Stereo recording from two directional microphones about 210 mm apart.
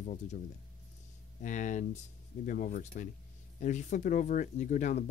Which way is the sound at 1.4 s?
35° left (ahead or behind).